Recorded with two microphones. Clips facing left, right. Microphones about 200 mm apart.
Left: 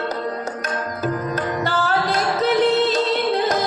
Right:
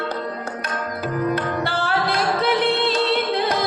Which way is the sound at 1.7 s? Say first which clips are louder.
Left 2 dB; 40° left (ahead or behind).